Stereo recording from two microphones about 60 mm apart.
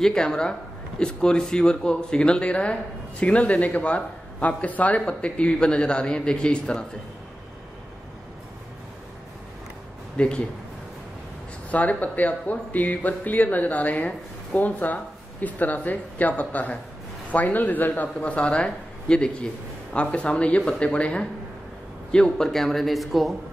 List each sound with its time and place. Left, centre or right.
0.0 s speech: centre
10.1 s speech: centre
11.7 s a man's voice: left; by 23.3 s centre